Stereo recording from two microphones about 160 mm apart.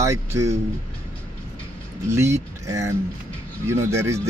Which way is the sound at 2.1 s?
15° right (ahead or behind).